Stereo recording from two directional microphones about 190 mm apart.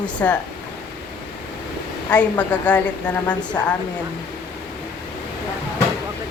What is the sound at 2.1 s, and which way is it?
Speech, 5° left (ahead or behind).